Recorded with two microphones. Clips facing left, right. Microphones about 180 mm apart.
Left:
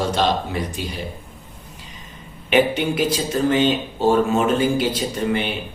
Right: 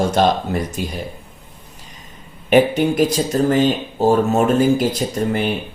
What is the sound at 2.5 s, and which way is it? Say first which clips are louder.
Speech: right 4 dB; 45° right (ahead or behind).